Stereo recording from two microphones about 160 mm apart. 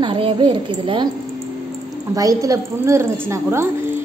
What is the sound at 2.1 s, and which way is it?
A woman's voice, 20° right (ahead or behind).